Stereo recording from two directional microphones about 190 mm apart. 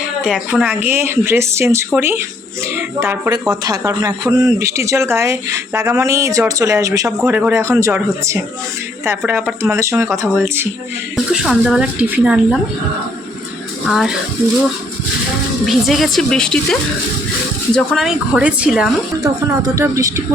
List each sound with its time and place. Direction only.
0.3 s speech: 5° right (ahead or behind)
13.8 s speech: centre (ahead or behind)
15.6 s speech: centre (ahead or behind)
17.7 s speech: centre (ahead or behind)
19.2 s speech: 15° right (ahead or behind)